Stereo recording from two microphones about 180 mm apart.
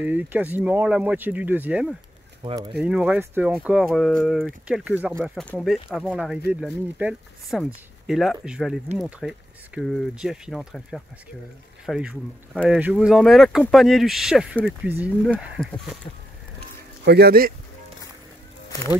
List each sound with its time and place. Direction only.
0.0 s speech: 10° right (ahead or behind)
17.0 s speech: 65° right (ahead or behind)